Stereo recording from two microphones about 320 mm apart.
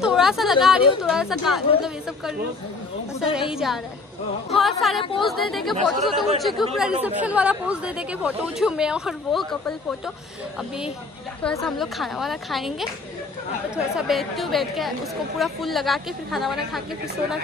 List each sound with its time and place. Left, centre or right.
0.0 s a woman's voice: centre
11.4 s a woman's voice: centre